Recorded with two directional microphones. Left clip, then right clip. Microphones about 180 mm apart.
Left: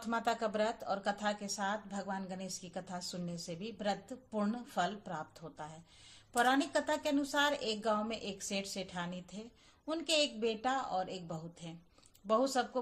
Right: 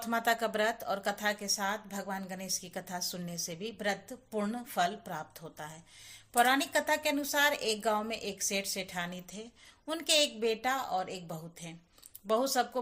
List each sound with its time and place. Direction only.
0.0 s speech: 20° right (ahead or behind)